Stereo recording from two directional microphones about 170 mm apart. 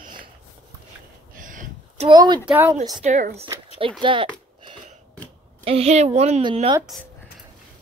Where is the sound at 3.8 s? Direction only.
30° right (ahead or behind).